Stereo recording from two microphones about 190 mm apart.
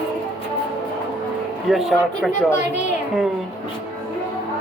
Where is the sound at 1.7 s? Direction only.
Centre (ahead or behind).